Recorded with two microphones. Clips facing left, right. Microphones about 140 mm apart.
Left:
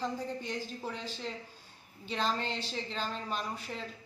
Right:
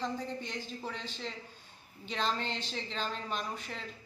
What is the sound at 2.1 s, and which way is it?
Speech, 5° left (ahead or behind).